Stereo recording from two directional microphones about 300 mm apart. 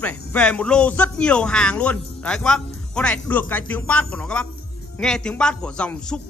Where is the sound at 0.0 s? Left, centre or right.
Centre.